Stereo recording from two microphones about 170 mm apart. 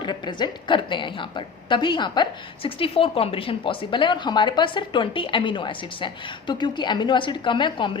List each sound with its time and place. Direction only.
0.0 s speech: 25° left (ahead or behind)